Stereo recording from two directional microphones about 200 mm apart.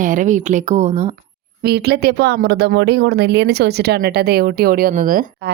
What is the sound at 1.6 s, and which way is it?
Speech, 55° right (ahead or behind).